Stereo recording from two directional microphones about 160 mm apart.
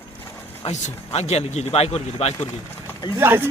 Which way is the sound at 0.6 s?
45° left (ahead or behind).